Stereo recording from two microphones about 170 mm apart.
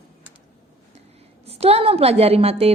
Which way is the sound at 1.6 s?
35° right (ahead or behind).